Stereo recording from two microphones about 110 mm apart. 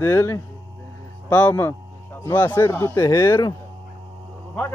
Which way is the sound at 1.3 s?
15° left (ahead or behind).